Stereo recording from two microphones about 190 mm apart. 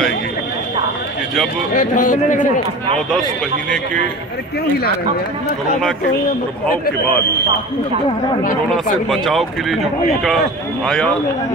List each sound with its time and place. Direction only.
1.7 s speech: 45° left (ahead or behind)
9.1 s speech: centre (ahead or behind)